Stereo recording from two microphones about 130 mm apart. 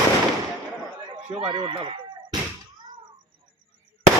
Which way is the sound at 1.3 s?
40° right (ahead or behind).